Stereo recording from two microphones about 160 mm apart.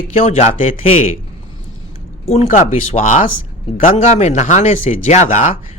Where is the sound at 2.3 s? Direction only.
45° left (ahead or behind).